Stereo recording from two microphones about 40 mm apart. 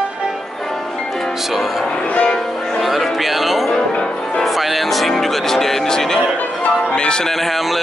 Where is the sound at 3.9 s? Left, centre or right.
Left.